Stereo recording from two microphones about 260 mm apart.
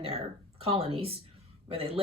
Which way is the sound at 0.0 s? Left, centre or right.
Right.